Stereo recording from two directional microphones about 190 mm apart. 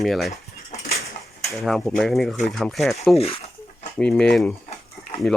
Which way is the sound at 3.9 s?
5° left (ahead or behind).